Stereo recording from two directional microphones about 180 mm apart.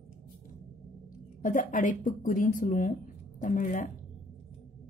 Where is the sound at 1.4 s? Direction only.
45° left (ahead or behind).